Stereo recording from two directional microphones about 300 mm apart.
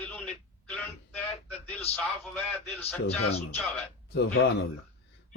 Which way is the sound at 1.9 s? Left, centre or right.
Centre.